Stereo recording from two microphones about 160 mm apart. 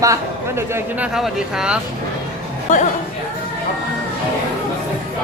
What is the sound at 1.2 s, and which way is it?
Speech, 5° right (ahead or behind).